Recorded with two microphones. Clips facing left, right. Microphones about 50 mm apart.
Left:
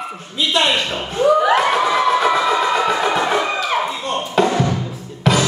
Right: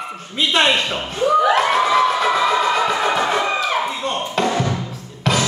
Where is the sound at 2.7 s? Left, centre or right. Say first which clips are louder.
Left 1 dB; centre.